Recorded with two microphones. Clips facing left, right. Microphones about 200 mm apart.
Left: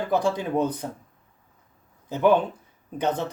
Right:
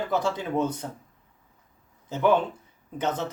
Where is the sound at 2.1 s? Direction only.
15° left (ahead or behind).